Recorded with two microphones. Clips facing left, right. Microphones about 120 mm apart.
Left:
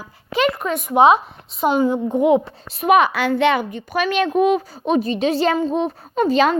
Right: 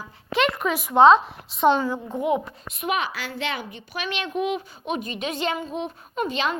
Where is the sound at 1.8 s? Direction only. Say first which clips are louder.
Left 9 dB; 20° left (ahead or behind).